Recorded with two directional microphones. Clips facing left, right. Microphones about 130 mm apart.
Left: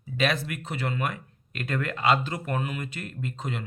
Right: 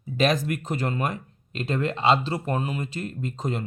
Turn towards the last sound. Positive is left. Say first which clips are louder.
# right 4 dB
turn(degrees=-40)  # may be behind; listen again after turning